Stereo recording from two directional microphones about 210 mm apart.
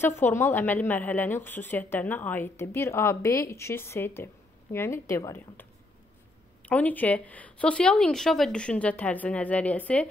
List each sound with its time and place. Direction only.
0.0 s a woman's voice: 10° left (ahead or behind)